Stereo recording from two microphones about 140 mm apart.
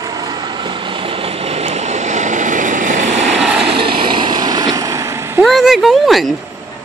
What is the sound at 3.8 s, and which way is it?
Vehicle, 40° right (ahead or behind).